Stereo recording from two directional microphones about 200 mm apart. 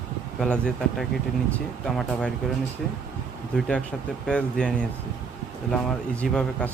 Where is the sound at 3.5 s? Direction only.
5° left (ahead or behind).